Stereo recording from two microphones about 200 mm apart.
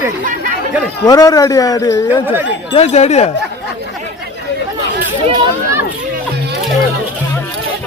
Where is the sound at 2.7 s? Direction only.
30° left (ahead or behind).